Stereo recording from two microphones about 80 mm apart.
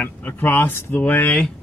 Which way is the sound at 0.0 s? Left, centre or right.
Left.